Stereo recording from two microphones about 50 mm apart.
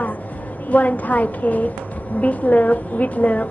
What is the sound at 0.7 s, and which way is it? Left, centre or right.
A woman's voice, left.